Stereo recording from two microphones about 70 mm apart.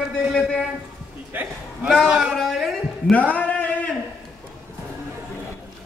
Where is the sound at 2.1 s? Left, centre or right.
Centre.